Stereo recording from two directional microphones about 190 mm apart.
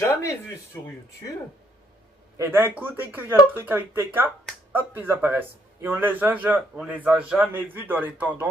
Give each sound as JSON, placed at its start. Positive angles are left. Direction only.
{"t": 0.0, "sound": "a sound", "side_deg": 15}
{"t": 0.7, "sound": "speech", "side_deg": 15}
{"t": 2.3, "sound": "a man's voice", "side_deg": -10}